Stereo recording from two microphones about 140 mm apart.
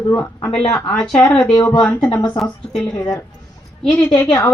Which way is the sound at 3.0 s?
25° left (ahead or behind).